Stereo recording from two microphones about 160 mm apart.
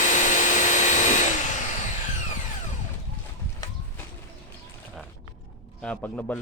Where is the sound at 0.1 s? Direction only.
50° left (ahead or behind).